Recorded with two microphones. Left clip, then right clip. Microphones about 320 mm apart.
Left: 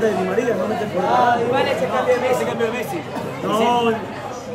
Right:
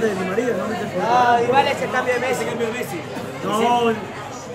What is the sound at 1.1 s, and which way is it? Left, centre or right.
Speech, right.